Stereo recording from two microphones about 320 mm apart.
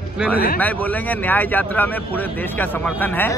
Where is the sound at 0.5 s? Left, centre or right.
Centre.